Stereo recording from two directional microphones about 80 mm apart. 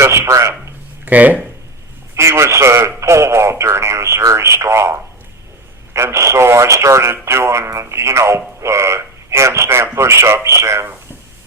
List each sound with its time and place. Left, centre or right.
0.0 s speech: right
1.0 s speech: right
2.1 s speech: right